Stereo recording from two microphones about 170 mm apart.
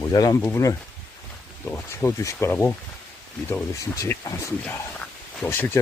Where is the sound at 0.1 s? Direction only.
25° left (ahead or behind).